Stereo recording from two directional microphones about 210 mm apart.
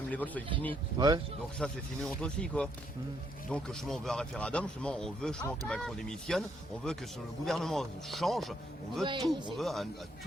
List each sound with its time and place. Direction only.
0.1 s speech: 5° left (ahead or behind)
0.7 s speech: 20° right (ahead or behind)
1.5 s speech: 5° left (ahead or behind)
7.4 s speech: centre (ahead or behind)
9.0 s speech: 20° right (ahead or behind)
9.6 s speech: centre (ahead or behind)